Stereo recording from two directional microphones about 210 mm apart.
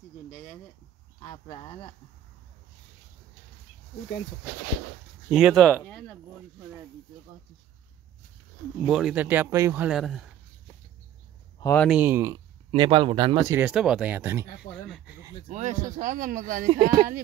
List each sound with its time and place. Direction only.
1.2 s speech: 20° left (ahead or behind)
5.3 s speech: 5° right (ahead or behind)
8.8 s speech: centre (ahead or behind)
11.6 s speech: 10° left (ahead or behind)
11.9 s speech: 10° right (ahead or behind)
15.4 s speech: 35° right (ahead or behind)